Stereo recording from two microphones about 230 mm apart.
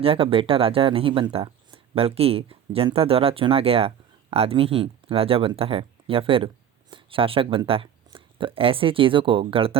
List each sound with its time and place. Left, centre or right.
0.0 s speech: right